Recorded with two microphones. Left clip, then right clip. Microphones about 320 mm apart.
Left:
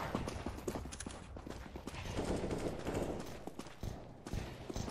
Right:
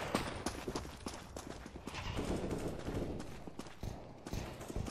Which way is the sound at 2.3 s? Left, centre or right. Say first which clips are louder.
Left 2 dB; centre.